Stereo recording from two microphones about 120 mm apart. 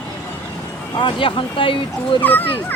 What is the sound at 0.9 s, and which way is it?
Speech, 45° left (ahead or behind).